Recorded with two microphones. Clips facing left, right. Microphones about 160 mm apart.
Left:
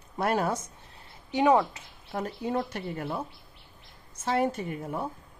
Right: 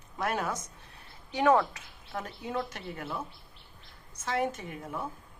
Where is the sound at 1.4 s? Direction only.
20° left (ahead or behind).